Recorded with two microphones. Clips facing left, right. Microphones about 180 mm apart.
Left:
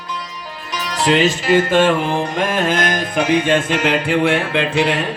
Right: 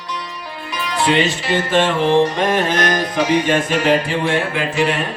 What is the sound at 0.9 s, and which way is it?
Music, 40° left (ahead or behind).